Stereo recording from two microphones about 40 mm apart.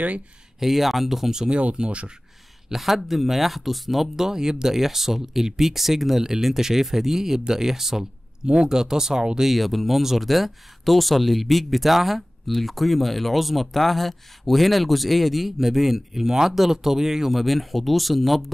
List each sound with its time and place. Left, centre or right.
0.6 s speech: centre
1.5 s speech: right
2.7 s speech: centre
4.3 s speech: centre
9.4 s speech: centre